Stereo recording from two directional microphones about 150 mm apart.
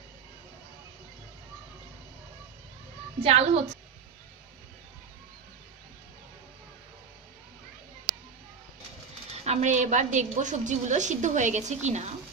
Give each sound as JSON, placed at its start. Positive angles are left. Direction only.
{"t": 3.2, "sound": "a woman's voice", "side_deg": -45}
{"t": 9.3, "sound": "a woman's voice", "side_deg": -45}